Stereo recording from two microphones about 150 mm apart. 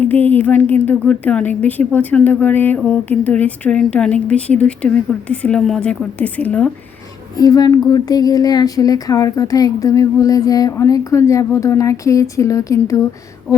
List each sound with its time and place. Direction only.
0.0 s a woman's voice: 10° left (ahead or behind)
7.3 s speech: 25° left (ahead or behind)